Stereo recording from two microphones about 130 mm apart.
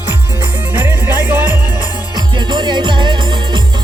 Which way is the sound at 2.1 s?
35° right (ahead or behind).